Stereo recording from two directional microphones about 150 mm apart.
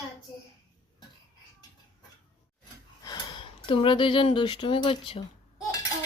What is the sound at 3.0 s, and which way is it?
Speech, 30° left (ahead or behind).